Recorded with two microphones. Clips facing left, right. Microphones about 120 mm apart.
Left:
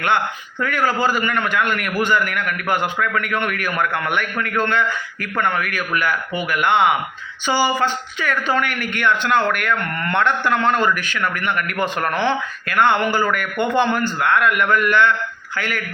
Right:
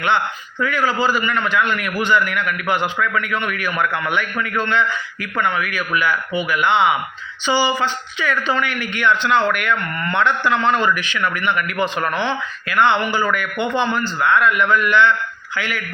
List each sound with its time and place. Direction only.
0.6 s a man's voice: 50° left (ahead or behind)